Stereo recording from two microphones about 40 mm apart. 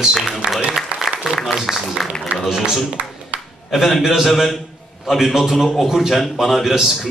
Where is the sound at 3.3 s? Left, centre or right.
Right.